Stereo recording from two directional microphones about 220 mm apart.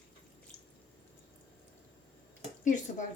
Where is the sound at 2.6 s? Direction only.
35° left (ahead or behind).